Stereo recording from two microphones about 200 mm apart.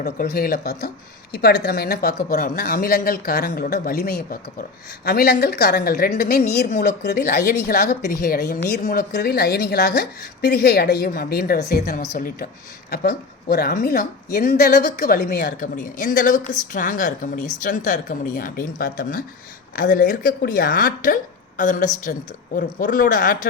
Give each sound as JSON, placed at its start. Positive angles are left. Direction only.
{"t": 0.0, "sound": "a woman's voice", "side_deg": 50}
{"t": 15.4, "sound": "a woman's voice", "side_deg": 40}